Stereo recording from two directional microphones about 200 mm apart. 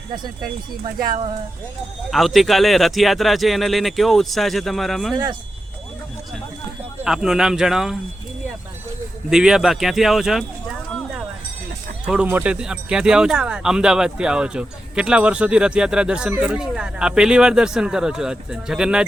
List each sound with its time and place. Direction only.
2.0 s speech: centre (ahead or behind)
5.1 s speech: 20° right (ahead or behind)
7.0 s speech: 5° right (ahead or behind)
9.3 s speech: 5° right (ahead or behind)
12.0 s speech: 5° right (ahead or behind)